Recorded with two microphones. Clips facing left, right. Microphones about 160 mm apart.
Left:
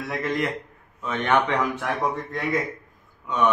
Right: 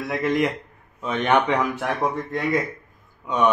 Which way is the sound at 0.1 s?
15° right (ahead or behind).